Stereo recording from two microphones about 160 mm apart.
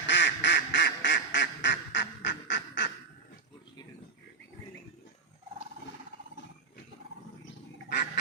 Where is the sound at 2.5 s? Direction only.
60° left (ahead or behind).